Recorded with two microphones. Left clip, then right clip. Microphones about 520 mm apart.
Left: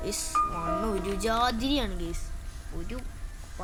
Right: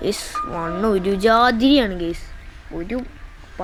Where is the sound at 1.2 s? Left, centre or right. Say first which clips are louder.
Right 12 dB; left.